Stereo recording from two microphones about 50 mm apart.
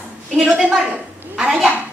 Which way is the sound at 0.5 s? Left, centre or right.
Centre.